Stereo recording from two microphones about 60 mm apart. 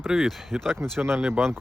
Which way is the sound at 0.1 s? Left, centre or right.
Centre.